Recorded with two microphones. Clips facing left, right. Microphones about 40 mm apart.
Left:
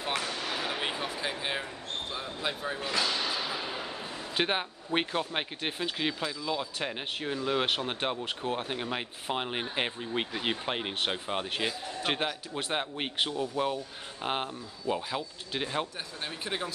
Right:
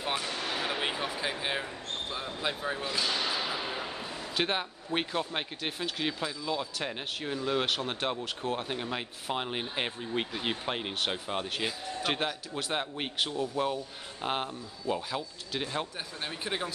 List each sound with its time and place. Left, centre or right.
0.7 s music: centre
2.1 s speech: centre
3.3 s a sound: centre
4.4 s speech: centre
12.5 s speech: centre
16.3 s speech: centre